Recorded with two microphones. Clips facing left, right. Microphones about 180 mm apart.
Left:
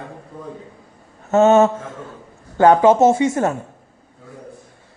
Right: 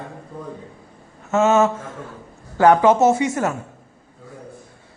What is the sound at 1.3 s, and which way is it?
Speech, 35° left (ahead or behind).